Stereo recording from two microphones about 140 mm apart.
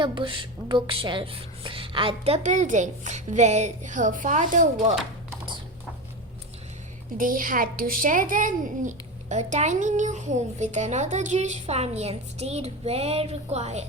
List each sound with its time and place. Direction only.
0.0 s a child's voice: 35° right (ahead or behind); by 4.6 s 65° right (ahead or behind)
7.2 s a child's voice: 75° right (ahead or behind); by 13.8 s 50° right (ahead or behind)